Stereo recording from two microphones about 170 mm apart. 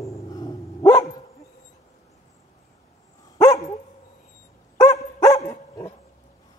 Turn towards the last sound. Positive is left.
turn(degrees=15)  # may be behind; listen again after turning